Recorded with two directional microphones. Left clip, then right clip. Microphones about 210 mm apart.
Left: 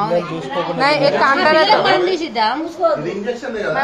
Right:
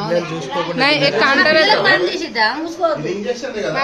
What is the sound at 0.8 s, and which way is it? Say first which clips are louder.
Speech: even; 20° right (ahead or behind).